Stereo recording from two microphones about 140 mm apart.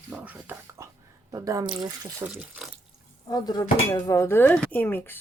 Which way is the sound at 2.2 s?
25° right (ahead or behind).